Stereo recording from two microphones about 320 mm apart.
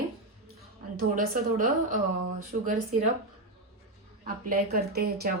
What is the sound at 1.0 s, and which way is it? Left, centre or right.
Speech, right.